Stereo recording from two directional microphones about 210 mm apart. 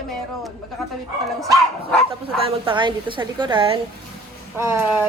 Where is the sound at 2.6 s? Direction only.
20° right (ahead or behind).